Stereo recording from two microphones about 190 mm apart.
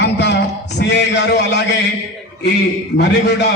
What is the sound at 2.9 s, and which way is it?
Speech, 60° left (ahead or behind).